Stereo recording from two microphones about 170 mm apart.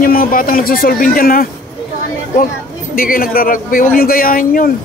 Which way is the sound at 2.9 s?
55° left (ahead or behind).